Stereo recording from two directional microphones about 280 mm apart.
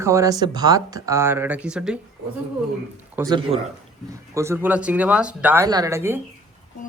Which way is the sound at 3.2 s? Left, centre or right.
Centre.